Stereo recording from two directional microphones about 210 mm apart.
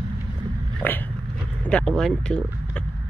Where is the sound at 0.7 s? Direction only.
10° left (ahead or behind).